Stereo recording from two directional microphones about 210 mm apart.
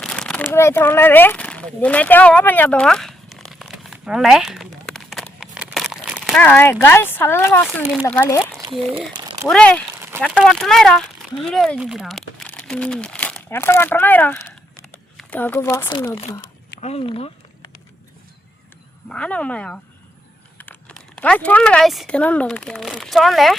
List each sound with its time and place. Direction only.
0.0 s a sound: 5° left (ahead or behind)
6.4 s speech: 10° left (ahead or behind)
16.8 s speech: 30° left (ahead or behind)
19.0 s speech: 5° left (ahead or behind)